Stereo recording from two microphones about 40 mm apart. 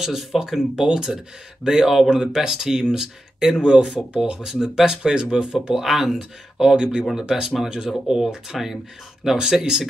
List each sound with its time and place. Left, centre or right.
0.0 s speech: centre
0.7 s speech: centre